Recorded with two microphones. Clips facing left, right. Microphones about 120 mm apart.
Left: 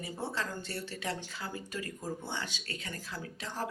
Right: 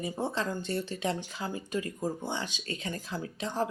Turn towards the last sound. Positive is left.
turn(degrees=-20)  # may be behind; listen again after turning